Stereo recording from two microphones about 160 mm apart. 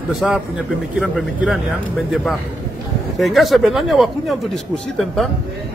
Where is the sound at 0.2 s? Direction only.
Centre (ahead or behind).